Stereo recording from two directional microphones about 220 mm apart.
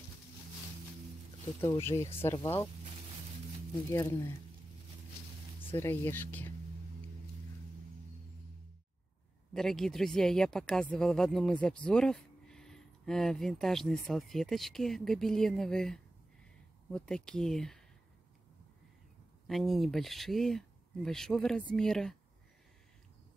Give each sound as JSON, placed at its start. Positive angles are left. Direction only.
{"t": 1.7, "sound": "speech", "side_deg": 10}
{"t": 3.9, "sound": "speech", "side_deg": 10}
{"t": 5.7, "sound": "speech", "side_deg": 10}
{"t": 9.5, "sound": "speech", "side_deg": 0}
{"t": 19.4, "sound": "speech", "side_deg": 0}